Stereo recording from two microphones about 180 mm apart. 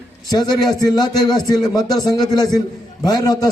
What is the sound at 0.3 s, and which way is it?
A man's voice, 25° left (ahead or behind).